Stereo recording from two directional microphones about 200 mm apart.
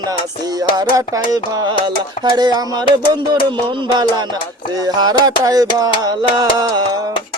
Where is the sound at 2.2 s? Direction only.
20° right (ahead or behind).